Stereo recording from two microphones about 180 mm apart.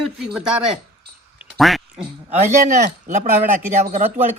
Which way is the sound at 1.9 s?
40° right (ahead or behind).